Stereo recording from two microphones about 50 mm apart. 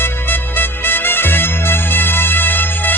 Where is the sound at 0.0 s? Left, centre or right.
Left.